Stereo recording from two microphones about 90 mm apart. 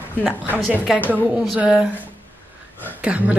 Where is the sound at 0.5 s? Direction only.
5° right (ahead or behind).